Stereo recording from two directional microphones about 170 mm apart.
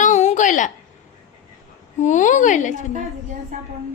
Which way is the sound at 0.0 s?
45° left (ahead or behind).